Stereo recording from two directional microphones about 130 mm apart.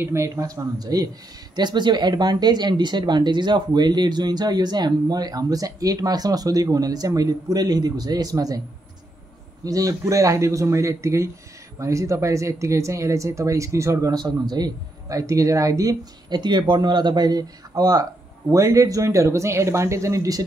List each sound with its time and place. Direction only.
0.0 s speech: 20° right (ahead or behind)
9.7 s speech: 25° right (ahead or behind)